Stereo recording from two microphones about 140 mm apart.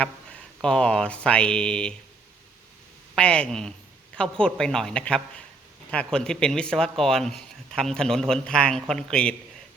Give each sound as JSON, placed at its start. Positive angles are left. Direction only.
{"t": 0.6, "sound": "speech", "side_deg": 5}
{"t": 3.2, "sound": "speech", "side_deg": 5}